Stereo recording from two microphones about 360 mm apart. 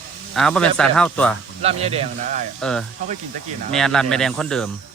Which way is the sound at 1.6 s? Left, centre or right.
Centre.